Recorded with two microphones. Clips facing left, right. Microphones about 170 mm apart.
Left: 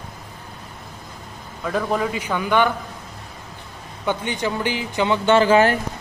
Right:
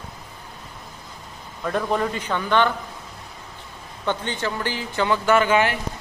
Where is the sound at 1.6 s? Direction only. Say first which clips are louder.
Left 1 dB; centre (ahead or behind).